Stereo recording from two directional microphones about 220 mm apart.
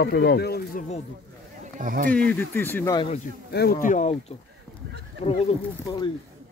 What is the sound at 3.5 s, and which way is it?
Speech, 45° left (ahead or behind).